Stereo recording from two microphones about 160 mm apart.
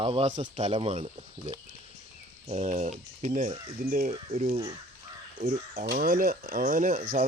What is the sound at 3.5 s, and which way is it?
Speech, 25° right (ahead or behind).